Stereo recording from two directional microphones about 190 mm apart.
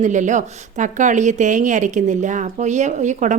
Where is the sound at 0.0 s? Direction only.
40° right (ahead or behind).